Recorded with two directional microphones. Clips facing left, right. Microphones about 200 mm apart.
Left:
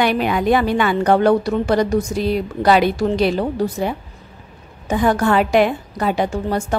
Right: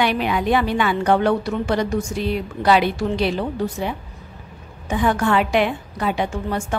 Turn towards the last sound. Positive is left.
turn(degrees=40)  # may be behind; listen again after turning